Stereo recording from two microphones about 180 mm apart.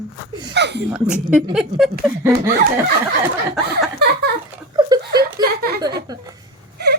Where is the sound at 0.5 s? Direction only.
70° right (ahead or behind).